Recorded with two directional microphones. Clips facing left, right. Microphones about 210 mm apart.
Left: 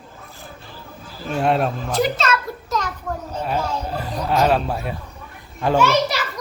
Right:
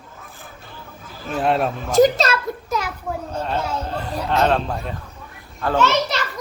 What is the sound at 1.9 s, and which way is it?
Speech, 40° right (ahead or behind).